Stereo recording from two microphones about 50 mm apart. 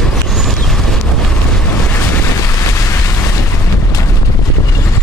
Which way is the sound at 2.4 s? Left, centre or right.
Left.